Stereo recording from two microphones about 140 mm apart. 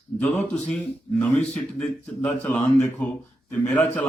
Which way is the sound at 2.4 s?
10° left (ahead or behind).